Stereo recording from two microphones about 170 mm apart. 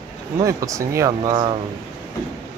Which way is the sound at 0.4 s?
20° right (ahead or behind).